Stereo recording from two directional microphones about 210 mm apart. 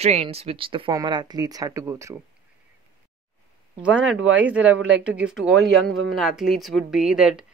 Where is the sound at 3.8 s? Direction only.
5° right (ahead or behind).